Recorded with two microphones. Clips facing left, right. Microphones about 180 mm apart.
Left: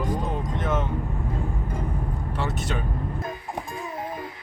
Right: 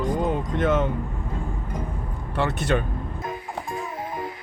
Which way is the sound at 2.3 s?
60° right (ahead or behind).